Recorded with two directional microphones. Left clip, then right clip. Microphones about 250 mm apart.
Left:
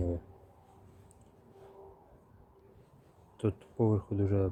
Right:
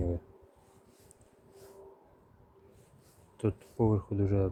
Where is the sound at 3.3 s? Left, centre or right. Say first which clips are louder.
Right 1 dB; centre.